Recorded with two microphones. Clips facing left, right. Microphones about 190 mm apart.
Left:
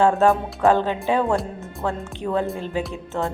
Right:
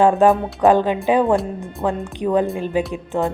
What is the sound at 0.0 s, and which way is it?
Speech, 15° right (ahead or behind).